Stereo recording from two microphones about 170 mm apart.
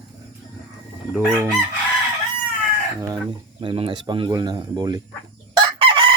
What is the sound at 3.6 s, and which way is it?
Speech, 30° right (ahead or behind).